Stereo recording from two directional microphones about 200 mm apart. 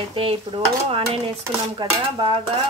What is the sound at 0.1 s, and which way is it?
Dishes, 25° right (ahead or behind).